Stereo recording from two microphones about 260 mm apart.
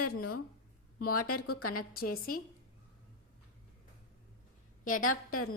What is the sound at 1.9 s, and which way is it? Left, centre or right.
Speech, left.